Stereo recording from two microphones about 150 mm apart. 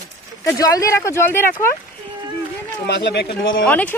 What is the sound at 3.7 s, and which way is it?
Speech, 10° left (ahead or behind).